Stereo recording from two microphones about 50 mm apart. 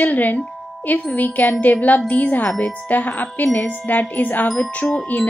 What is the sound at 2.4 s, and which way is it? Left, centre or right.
Speech, centre.